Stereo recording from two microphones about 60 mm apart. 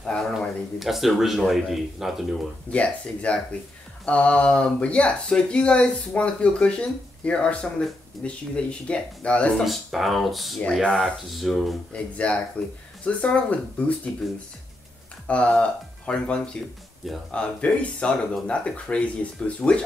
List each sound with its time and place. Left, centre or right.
0.0 s a sound: centre
0.7 s a man's voice: centre
2.7 s speech: left
9.7 s a man's voice: centre
11.9 s speech: centre
15.2 s speech: left